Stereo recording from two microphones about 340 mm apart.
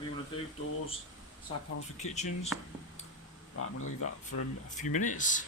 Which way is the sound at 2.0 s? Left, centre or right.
Centre.